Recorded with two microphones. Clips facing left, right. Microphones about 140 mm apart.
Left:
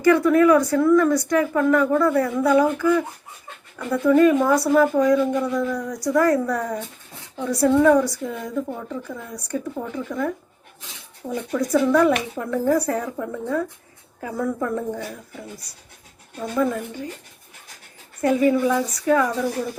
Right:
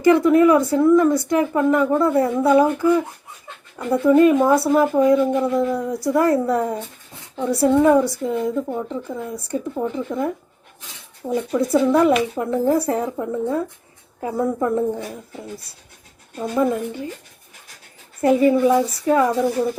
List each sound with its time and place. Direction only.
0.0 s a woman's voice: 25° right (ahead or behind)
11.5 s a woman's voice: 25° right (ahead or behind)
16.6 s a woman's voice: 25° right (ahead or behind)
18.2 s a woman's voice: 25° right (ahead or behind)